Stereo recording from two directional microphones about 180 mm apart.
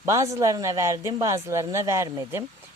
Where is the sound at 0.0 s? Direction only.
15° right (ahead or behind).